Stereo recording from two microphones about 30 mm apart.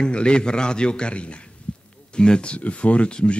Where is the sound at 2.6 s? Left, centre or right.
Left.